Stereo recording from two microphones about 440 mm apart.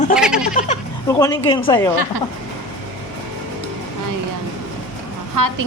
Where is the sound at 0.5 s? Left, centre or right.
Centre.